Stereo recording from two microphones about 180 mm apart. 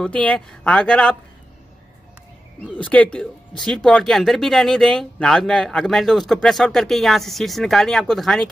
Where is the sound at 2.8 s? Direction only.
5° left (ahead or behind).